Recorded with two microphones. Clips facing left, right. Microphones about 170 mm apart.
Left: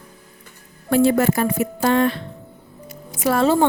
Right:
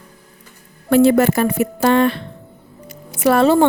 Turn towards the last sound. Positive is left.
turn(degrees=-70)  # may be behind; listen again after turning